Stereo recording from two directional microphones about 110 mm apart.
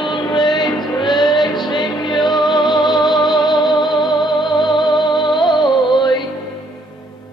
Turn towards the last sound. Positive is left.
turn(degrees=40)  # may be behind; listen again after turning